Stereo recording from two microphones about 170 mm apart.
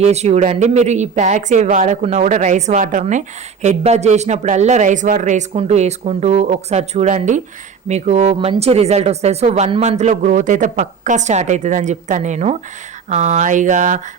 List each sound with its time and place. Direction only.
0.0 s speech: 40° right (ahead or behind)